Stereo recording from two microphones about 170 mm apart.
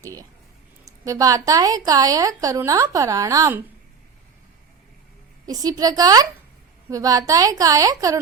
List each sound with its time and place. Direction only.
0.0 s a sound: 20° right (ahead or behind)
1.0 s a woman's voice: 20° right (ahead or behind)
5.5 s a woman's voice: 20° right (ahead or behind)